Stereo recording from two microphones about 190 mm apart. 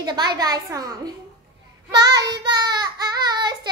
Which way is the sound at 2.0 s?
20° right (ahead or behind).